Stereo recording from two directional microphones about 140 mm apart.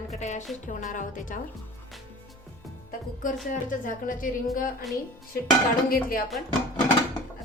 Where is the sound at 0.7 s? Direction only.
65° left (ahead or behind).